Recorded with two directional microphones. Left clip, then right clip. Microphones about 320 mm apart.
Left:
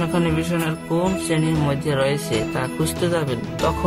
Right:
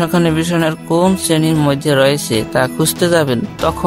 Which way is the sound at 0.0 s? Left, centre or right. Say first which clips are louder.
Right 7 dB; right.